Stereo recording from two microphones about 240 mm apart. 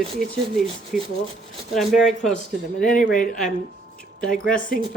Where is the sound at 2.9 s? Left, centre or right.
Left.